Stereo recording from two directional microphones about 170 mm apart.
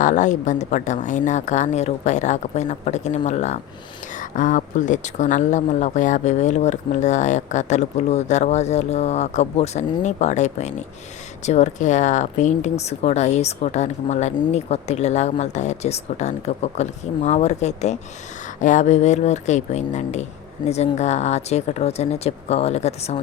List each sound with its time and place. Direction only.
0.0 s speech: 45° left (ahead or behind)